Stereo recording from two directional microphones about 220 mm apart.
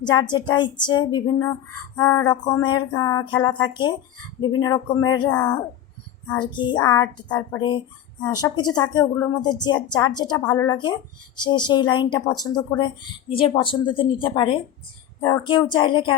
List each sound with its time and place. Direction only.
0.0 s a woman's voice: 20° left (ahead or behind)
2.0 s a sound: 15° left (ahead or behind)
4.4 s a woman's voice: 20° left (ahead or behind)
6.5 s a woman's voice: 20° left (ahead or behind)